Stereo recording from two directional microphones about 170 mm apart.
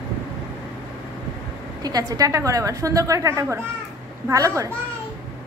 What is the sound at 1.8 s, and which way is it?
A woman's voice, 20° right (ahead or behind).